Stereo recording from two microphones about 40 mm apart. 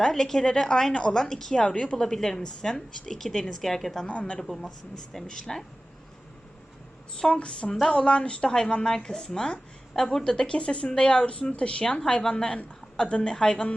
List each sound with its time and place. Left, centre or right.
0.1 s a woman's voice: centre
1.7 s speech: left
2.0 s a woman's voice: centre
4.1 s speech: left
4.4 s a woman's voice: centre
7.3 s speech: left